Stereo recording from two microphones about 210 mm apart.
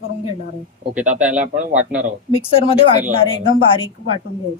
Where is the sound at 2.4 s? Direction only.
25° left (ahead or behind).